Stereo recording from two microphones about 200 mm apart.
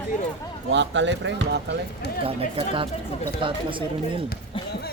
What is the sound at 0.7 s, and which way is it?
Speech, 65° right (ahead or behind).